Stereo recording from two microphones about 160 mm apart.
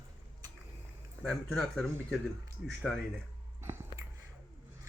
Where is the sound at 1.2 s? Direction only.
Centre (ahead or behind).